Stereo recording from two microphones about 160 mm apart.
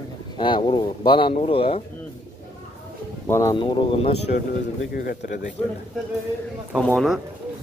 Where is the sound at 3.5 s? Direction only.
30° left (ahead or behind).